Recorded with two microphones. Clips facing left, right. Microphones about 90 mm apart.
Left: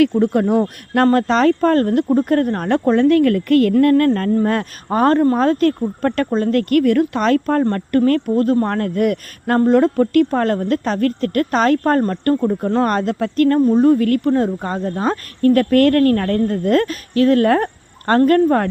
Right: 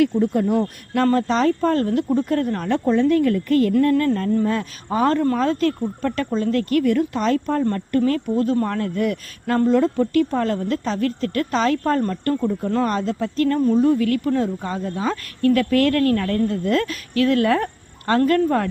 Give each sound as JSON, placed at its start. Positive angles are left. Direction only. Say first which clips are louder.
{"t": 0.2, "sound": "speech", "louder": "left 4 dB", "side_deg": 70}
{"t": 12.9, "sound": "speech", "louder": "left 4 dB", "side_deg": 60}
{"t": 13.7, "sound": "speech", "louder": "left 4 dB", "side_deg": 45}